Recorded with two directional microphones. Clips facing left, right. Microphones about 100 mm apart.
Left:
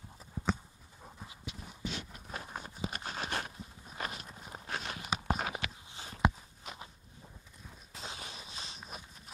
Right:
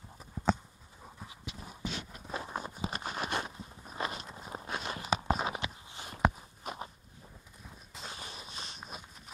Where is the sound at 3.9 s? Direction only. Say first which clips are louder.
Right 4 dB; 25° right (ahead or behind).